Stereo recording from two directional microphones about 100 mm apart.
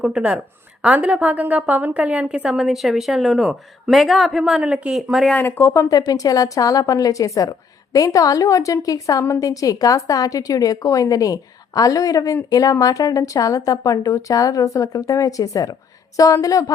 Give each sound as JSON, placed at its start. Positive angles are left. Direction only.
{"t": 0.0, "sound": "a woman's voice", "side_deg": -10}
{"t": 5.4, "sound": "a woman's voice", "side_deg": 25}